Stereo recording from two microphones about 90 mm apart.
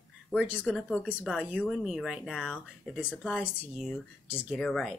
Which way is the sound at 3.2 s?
20° left (ahead or behind).